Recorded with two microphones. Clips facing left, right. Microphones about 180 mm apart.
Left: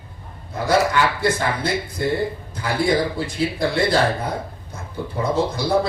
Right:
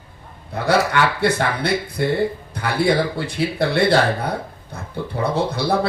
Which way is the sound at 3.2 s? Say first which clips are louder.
Right 1 dB; 65° right (ahead or behind).